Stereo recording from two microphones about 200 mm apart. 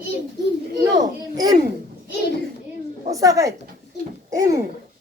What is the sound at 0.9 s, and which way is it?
Speech, 20° right (ahead or behind).